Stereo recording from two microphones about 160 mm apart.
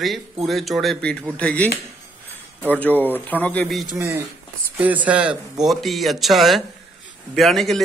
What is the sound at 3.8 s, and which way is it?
Speech, 20° right (ahead or behind).